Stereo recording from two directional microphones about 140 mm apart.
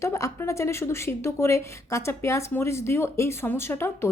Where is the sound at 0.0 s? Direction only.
20° left (ahead or behind).